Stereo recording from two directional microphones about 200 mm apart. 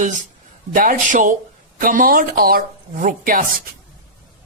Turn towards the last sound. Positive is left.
turn(degrees=-45)  # may be behind; listen again after turning